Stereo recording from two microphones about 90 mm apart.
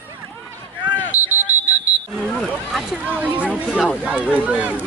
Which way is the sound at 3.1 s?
15° right (ahead or behind).